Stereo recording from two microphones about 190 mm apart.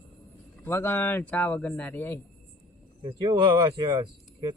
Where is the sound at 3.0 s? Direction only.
25° right (ahead or behind).